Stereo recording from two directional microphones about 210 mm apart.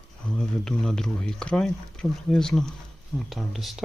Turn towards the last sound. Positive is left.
turn(degrees=0)  # may be behind; listen again after turning